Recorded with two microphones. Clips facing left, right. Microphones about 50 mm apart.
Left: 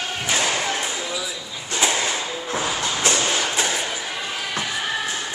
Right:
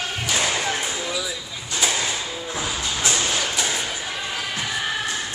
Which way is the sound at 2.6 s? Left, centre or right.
Left.